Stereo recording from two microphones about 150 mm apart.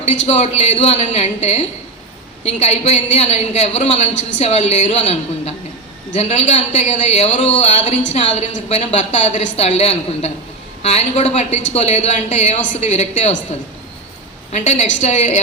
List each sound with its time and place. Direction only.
0.0 s a woman's voice: 45° left (ahead or behind)
14.5 s a woman's voice: 50° left (ahead or behind)